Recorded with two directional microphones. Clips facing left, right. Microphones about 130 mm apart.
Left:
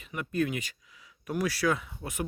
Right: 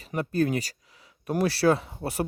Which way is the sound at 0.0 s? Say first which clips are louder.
Right 5 dB; 35° right (ahead or behind).